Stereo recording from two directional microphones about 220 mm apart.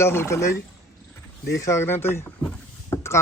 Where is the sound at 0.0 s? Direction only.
10° left (ahead or behind).